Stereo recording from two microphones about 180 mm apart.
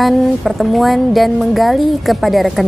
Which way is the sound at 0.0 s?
Centre (ahead or behind).